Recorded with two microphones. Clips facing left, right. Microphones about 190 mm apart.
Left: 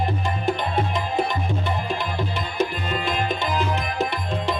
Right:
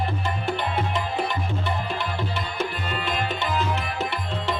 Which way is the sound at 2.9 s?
15° left (ahead or behind).